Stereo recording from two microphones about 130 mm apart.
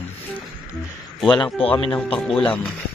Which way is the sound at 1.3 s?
40° left (ahead or behind).